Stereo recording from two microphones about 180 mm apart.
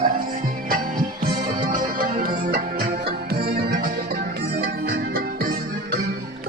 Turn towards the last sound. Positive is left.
turn(degrees=-65)  # may be behind; listen again after turning